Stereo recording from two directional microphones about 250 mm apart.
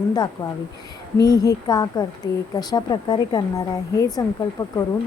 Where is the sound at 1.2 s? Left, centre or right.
Centre.